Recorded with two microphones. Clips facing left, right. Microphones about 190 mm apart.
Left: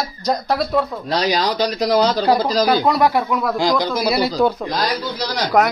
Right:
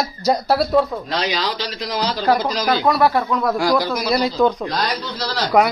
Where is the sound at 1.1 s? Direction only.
40° left (ahead or behind).